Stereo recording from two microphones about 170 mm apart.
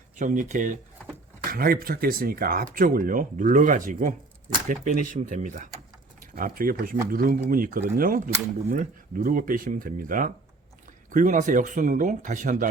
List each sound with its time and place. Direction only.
0.2 s speech: 50° right (ahead or behind)
1.5 s speech: 60° right (ahead or behind)